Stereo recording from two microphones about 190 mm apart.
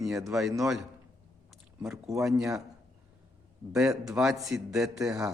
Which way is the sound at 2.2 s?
Centre (ahead or behind).